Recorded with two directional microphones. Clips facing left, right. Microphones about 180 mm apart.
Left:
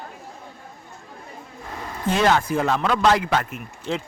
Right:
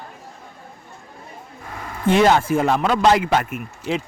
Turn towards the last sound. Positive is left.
turn(degrees=-15)  # may be behind; listen again after turning